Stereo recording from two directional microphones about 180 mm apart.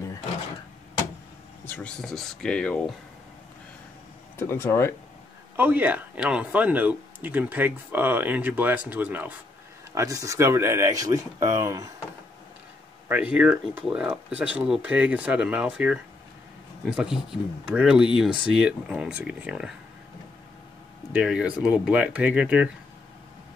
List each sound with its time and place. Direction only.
1.7 s speech: 5° left (ahead or behind)
4.4 s speech: 15° left (ahead or behind)
5.6 s speech: 10° right (ahead or behind)
13.1 s speech: 10° right (ahead or behind)
21.1 s speech: 5° right (ahead or behind)